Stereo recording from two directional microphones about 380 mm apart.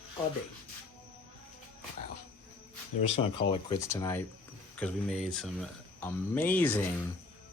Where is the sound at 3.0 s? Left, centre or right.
Centre.